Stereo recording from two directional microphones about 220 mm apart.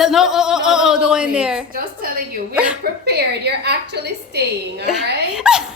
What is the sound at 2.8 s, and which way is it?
A woman's voice, 45° right (ahead or behind).